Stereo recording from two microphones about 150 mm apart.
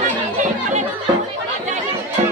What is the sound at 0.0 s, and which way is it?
Chatter, 55° right (ahead or behind).